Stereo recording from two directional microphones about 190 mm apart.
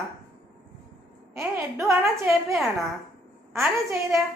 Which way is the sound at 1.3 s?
15° right (ahead or behind).